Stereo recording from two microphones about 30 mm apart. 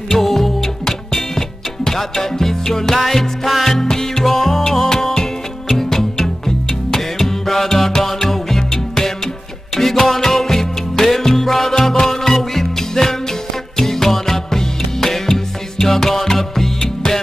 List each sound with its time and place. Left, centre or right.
0.1 s music: centre
0.8 s music: centre
3.8 s music: centre
4.2 s music: centre